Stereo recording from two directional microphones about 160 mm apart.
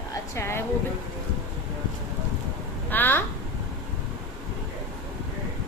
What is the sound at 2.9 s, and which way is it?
Speech, 10° left (ahead or behind).